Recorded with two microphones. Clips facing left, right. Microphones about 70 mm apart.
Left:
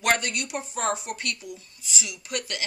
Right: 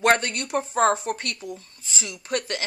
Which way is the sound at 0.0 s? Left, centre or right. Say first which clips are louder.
Right 4 dB; right.